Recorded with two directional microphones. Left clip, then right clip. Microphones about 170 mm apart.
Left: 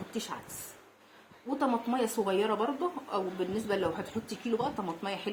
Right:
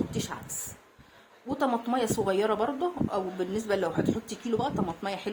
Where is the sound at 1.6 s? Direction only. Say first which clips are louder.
Right 3 dB; 45° right (ahead or behind).